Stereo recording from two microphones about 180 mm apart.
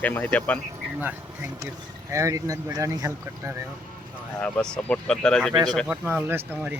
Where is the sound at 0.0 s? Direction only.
10° left (ahead or behind).